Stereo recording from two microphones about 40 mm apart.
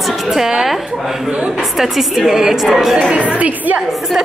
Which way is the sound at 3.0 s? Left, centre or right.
Right.